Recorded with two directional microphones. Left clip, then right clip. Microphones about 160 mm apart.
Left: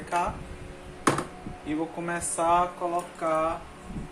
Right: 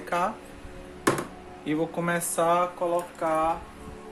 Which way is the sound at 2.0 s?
65° right (ahead or behind).